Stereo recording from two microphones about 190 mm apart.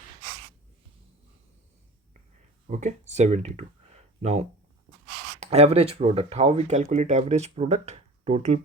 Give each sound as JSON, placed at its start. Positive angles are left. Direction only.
{"t": 2.6, "sound": "speech", "side_deg": -40}